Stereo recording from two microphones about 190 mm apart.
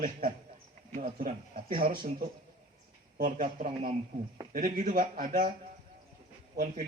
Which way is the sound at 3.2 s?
45° right (ahead or behind).